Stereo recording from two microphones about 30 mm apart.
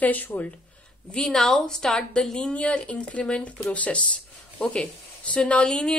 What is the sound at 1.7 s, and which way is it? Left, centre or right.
Speech, left.